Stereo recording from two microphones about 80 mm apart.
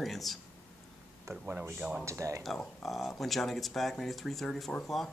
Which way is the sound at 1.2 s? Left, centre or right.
Right.